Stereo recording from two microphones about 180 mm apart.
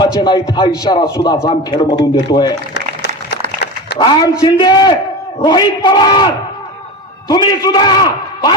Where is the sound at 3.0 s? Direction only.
70° left (ahead or behind).